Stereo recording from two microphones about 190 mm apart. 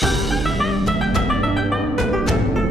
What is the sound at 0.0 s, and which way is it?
Music, centre (ahead or behind).